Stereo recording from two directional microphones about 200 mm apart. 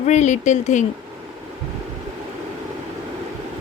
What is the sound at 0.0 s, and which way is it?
Speech, 35° left (ahead or behind).